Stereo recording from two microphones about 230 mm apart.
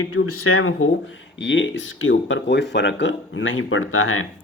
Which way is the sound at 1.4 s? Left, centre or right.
Left.